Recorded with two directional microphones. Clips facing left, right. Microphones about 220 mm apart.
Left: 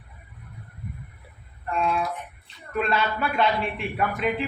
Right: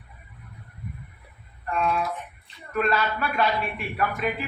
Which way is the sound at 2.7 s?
25° left (ahead or behind).